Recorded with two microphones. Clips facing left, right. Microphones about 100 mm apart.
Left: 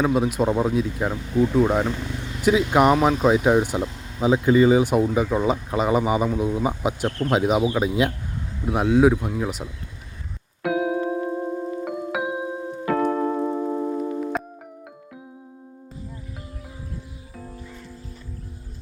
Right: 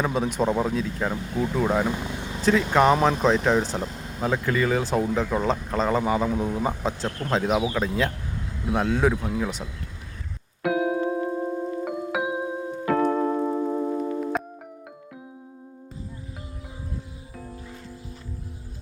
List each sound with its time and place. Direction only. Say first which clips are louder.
0.0 s speech: left 3 dB; 5° left (ahead or behind)
1.9 s vehicle: even; 20° right (ahead or behind)
2.4 s speech: left 2 dB; 15° left (ahead or behind)
10.6 s music: left 1 dB; centre (ahead or behind)